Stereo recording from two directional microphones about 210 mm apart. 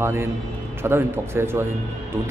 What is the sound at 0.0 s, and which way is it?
Speech, 10° right (ahead or behind).